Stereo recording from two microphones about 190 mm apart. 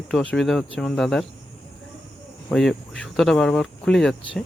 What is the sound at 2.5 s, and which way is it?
Speech, centre (ahead or behind).